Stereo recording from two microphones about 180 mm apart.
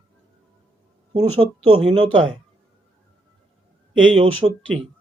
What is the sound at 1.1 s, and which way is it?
Speech, 30° right (ahead or behind).